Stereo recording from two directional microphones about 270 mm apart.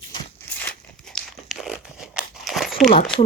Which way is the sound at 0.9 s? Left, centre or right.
Centre.